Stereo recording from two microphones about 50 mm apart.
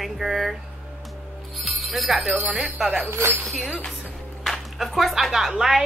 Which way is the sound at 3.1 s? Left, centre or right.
Right.